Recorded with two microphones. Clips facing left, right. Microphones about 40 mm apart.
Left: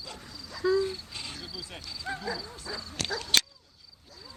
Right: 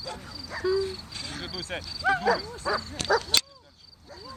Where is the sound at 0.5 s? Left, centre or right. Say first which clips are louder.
Even; right.